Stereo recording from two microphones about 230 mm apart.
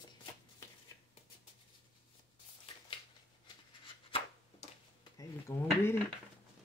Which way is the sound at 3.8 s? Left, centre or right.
Left.